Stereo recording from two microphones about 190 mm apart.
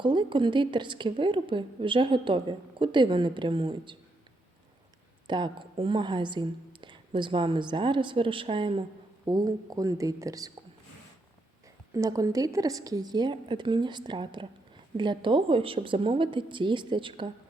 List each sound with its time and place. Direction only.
0.0 s a woman's voice: 25° right (ahead or behind)
5.3 s a woman's voice: 25° right (ahead or behind)
11.9 s a woman's voice: 15° right (ahead or behind)